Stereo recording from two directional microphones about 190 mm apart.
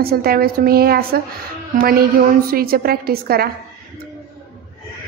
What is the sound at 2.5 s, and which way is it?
A woman's voice, 50° right (ahead or behind).